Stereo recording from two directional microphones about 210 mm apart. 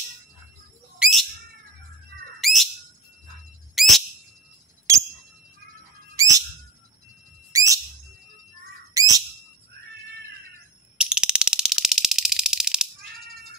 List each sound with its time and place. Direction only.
0.9 s bird: 5° right (ahead or behind)
2.4 s bird: centre (ahead or behind)
3.8 s bird: centre (ahead or behind)
4.9 s a sound: 15° right (ahead or behind)
6.1 s bird: 15° right (ahead or behind)
7.5 s whistle: 15° right (ahead or behind)
8.9 s bird: 15° right (ahead or behind)
11.0 s fire alarm: 5° right (ahead or behind)